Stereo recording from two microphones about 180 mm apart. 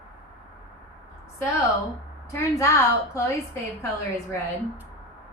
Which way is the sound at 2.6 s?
15° left (ahead or behind).